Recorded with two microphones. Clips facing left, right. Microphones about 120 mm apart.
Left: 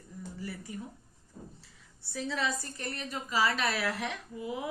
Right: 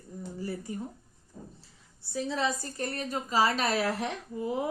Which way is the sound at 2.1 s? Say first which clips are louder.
Right 3 dB; 20° right (ahead or behind).